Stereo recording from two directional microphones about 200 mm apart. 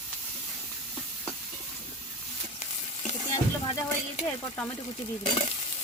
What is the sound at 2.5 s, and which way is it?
Stir, 35° left (ahead or behind).